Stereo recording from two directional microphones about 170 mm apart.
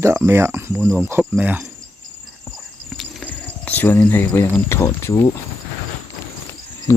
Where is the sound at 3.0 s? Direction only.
5° left (ahead or behind).